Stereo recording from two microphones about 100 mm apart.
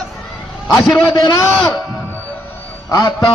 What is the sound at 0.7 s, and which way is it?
Speech, 40° left (ahead or behind).